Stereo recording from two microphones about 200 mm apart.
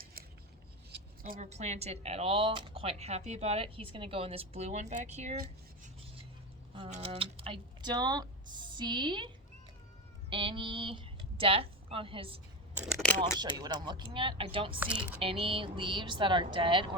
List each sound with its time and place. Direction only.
0.0 s scissors: 50° right (ahead or behind)
0.9 s speech: 45° right (ahead or behind)
6.7 s speech: 30° right (ahead or behind)
13.4 s speech: 20° right (ahead or behind)
14.8 s speech: 5° right (ahead or behind)
15.2 s speech: 25° right (ahead or behind)